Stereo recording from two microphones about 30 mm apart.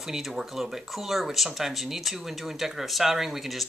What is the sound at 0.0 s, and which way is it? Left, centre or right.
Speech, centre.